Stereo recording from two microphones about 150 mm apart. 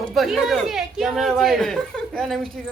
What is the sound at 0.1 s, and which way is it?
Speech, centre (ahead or behind).